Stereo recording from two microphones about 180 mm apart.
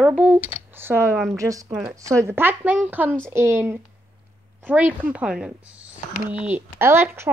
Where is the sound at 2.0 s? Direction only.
15° right (ahead or behind).